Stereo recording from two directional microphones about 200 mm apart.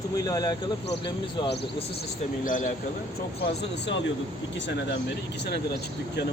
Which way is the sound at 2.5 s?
40° left (ahead or behind).